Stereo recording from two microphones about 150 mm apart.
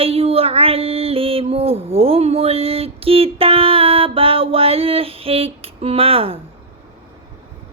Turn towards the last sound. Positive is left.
turn(degrees=-40)  # may be behind; listen again after turning